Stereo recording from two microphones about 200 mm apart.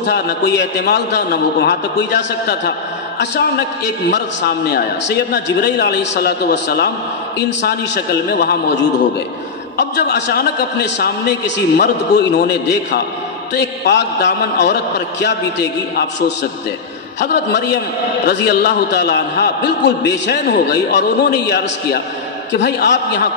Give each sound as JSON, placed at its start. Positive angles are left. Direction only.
{"t": 0.0, "sound": "a man's voice", "side_deg": 60}